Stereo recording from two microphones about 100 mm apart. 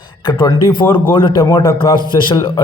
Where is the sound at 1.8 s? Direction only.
50° left (ahead or behind).